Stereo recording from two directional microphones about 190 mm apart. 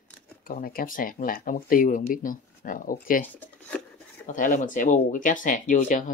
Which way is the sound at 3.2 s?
10° left (ahead or behind).